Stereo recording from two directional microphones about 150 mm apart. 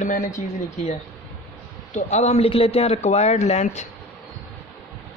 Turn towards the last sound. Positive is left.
turn(degrees=50)  # may be behind; listen again after turning